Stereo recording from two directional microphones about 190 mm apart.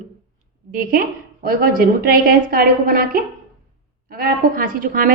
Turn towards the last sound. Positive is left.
turn(degrees=-45)  # may be behind; listen again after turning